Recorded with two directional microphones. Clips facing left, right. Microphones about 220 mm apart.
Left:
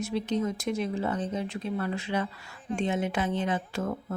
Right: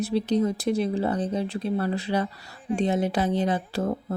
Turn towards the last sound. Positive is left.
turn(degrees=-35)  # may be behind; listen again after turning